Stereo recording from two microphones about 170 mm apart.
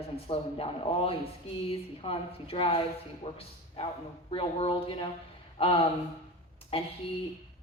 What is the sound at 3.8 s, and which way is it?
A woman's voice, 35° left (ahead or behind).